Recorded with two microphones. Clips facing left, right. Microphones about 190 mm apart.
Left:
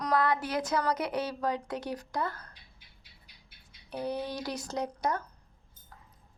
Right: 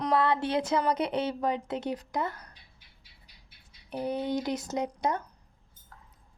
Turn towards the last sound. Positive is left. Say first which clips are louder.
# right 2 dB
turn(degrees=-20)  # may be behind; listen again after turning